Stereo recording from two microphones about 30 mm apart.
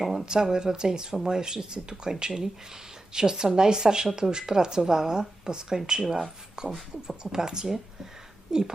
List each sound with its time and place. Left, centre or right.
0.0 s a sound: centre
0.3 s speech: right
6.7 s speech: centre
7.2 s speech: right